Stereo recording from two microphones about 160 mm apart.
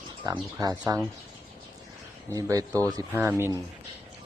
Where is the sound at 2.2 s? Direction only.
20° right (ahead or behind).